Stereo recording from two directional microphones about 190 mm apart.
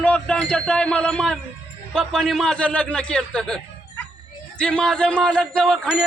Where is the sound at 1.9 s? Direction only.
5° left (ahead or behind).